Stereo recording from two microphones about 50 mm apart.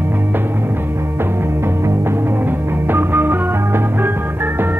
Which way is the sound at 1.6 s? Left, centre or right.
Right.